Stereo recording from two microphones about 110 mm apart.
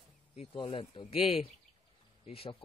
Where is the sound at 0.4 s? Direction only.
60° left (ahead or behind).